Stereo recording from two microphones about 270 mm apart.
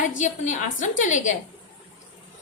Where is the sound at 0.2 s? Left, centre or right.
Left.